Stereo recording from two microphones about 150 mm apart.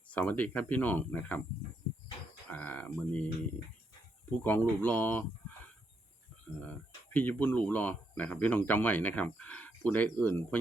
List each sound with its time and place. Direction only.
0.1 s speech: 10° left (ahead or behind)
2.5 s speech: 10° left (ahead or behind)
4.4 s speech: 15° left (ahead or behind)
6.7 s speech: 10° left (ahead or behind)